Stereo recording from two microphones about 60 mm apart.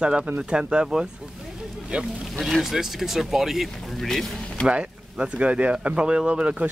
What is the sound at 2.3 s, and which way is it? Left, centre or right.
Speech, centre.